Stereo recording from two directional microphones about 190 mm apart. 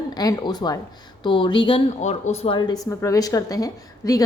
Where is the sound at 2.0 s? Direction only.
40° left (ahead or behind).